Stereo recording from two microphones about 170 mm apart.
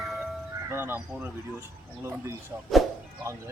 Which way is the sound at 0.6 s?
15° right (ahead or behind).